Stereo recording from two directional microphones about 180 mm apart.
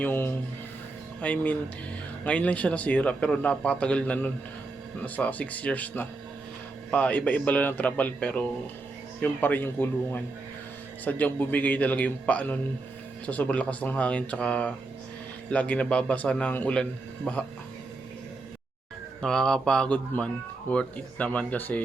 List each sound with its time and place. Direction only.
0.0 s speech: 10° left (ahead or behind)
19.2 s speech: 5° left (ahead or behind)